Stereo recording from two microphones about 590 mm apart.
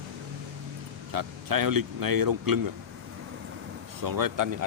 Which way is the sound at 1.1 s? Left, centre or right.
Right.